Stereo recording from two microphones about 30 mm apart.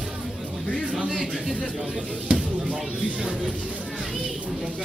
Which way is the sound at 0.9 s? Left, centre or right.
Right.